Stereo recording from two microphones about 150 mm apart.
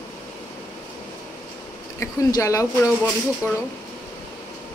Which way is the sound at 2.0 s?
20° left (ahead or behind).